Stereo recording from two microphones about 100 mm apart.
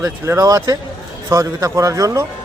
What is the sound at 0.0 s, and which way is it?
Speech, 35° right (ahead or behind).